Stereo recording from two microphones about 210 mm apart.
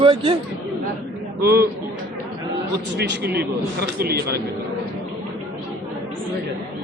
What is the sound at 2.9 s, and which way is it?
Speech, 50° right (ahead or behind).